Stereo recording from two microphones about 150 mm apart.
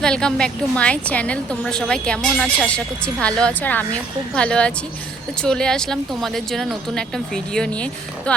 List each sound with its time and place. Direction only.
0.0 s a woman's voice: 5° left (ahead or behind)